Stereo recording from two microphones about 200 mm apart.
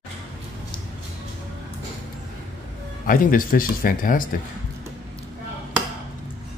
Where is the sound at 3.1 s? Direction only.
45° left (ahead or behind).